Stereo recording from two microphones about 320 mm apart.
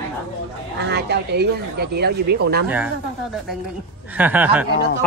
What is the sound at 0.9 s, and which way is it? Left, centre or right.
Speech, right.